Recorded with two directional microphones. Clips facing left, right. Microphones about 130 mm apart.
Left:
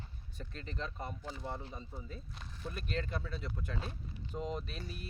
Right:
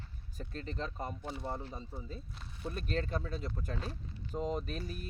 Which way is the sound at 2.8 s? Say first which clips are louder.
Right 3 dB; 40° right (ahead or behind).